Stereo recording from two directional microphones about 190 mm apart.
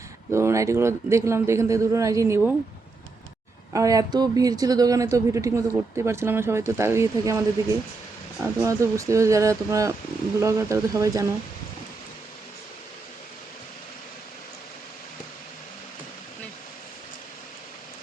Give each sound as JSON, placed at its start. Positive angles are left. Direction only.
{"t": 0.3, "sound": "speech", "side_deg": -15}
{"t": 3.7, "sound": "speech", "side_deg": -15}